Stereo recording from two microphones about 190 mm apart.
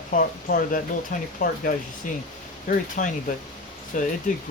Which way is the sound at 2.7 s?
45° left (ahead or behind).